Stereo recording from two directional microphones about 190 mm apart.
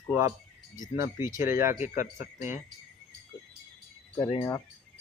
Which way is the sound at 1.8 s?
40° left (ahead or behind).